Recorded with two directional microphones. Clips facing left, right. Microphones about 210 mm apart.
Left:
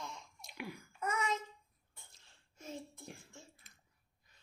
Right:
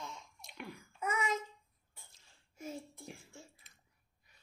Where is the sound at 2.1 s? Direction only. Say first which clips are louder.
Right 2 dB; centre (ahead or behind).